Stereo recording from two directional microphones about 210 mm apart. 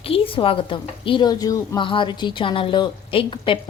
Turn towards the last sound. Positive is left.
turn(degrees=25)  # may be behind; listen again after turning